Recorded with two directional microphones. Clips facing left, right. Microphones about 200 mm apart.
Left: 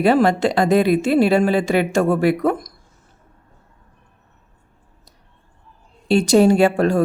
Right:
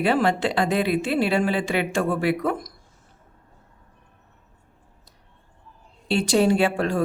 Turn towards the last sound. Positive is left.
turn(degrees=45)  # may be behind; listen again after turning